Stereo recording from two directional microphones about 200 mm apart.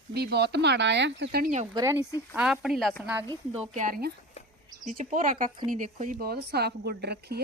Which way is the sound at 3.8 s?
45° right (ahead or behind).